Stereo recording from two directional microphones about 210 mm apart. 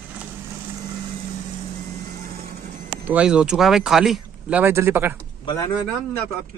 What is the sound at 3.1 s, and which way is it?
Speech, 5° right (ahead or behind).